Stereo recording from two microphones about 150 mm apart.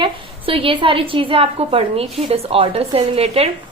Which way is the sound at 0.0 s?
35° right (ahead or behind).